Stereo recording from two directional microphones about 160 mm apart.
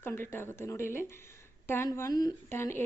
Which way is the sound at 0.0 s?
15° left (ahead or behind).